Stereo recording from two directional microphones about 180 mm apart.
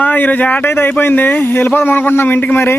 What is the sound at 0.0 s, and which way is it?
Speech, 10° left (ahead or behind).